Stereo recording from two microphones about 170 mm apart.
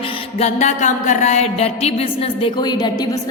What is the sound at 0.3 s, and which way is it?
Music, 40° left (ahead or behind).